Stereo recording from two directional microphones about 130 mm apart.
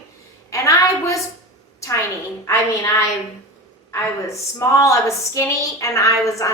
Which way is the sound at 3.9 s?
20° left (ahead or behind).